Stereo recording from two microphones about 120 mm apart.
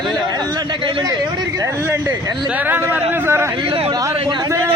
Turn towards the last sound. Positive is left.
turn(degrees=-20)  # may be behind; listen again after turning